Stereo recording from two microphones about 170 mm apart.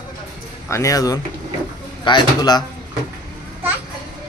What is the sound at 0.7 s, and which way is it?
A man's voice, 20° left (ahead or behind).